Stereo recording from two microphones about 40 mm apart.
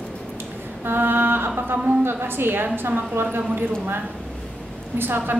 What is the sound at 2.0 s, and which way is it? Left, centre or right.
A woman's voice, right.